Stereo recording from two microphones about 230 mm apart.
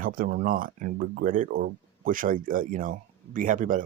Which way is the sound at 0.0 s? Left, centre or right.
Right.